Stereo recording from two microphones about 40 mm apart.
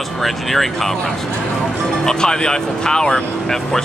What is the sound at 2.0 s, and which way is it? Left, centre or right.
Speech, centre.